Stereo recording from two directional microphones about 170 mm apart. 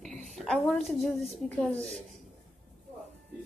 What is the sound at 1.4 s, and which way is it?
Speech, 5° left (ahead or behind).